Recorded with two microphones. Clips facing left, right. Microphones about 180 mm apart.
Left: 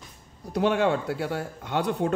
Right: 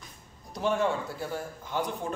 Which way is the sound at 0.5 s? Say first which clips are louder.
Left 5 dB; 70° left (ahead or behind).